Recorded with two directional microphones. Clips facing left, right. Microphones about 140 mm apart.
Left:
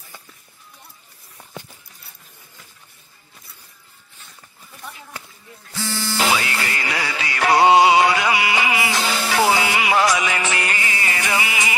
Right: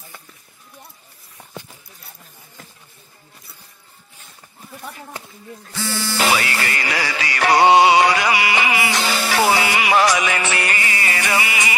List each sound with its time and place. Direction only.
6.3 s music: 70° right (ahead or behind)